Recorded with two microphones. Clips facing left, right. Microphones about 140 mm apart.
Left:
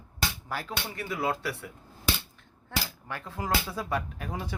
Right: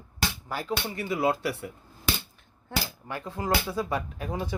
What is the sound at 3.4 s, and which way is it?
Speech, 5° right (ahead or behind).